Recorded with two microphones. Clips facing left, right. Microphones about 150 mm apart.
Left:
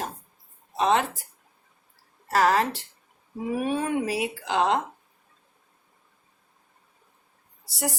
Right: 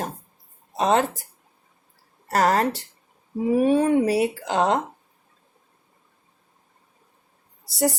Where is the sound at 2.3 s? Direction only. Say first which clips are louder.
Right 2 dB; 40° right (ahead or behind).